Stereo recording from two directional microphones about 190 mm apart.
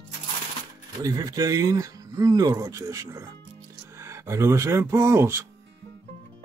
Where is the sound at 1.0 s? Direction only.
20° right (ahead or behind).